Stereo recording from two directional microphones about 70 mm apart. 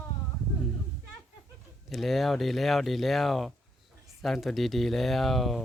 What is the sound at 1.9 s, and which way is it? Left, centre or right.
Speech, centre.